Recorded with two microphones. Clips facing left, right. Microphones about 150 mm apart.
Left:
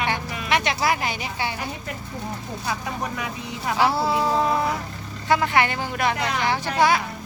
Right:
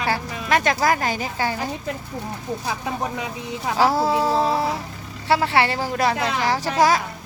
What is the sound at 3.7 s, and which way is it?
A woman's voice, 40° right (ahead or behind).